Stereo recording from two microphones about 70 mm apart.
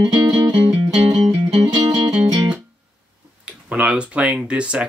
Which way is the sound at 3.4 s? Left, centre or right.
Centre.